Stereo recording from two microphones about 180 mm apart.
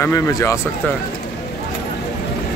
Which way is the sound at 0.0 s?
15° left (ahead or behind).